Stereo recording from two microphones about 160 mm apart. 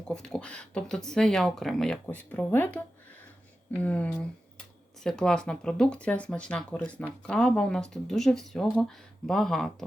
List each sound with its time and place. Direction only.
0.1 s speech: 5° left (ahead or behind)